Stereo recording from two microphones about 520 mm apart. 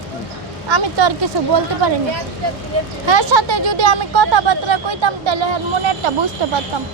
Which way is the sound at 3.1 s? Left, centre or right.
Right.